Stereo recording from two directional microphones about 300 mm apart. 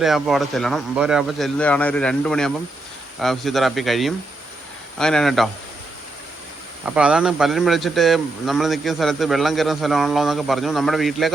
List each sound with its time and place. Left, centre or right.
0.0 s a man's voice: centre
6.8 s a man's voice: centre